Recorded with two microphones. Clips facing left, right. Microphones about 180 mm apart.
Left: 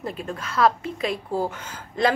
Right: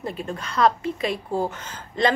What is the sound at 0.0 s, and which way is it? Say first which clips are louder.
A woman's voice: right 1 dB; centre (ahead or behind).